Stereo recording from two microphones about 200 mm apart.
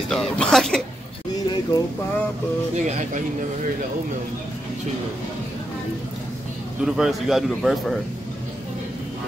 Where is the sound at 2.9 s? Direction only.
35° right (ahead or behind).